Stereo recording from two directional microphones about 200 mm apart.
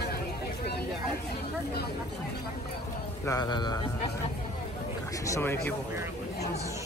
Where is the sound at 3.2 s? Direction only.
20° left (ahead or behind).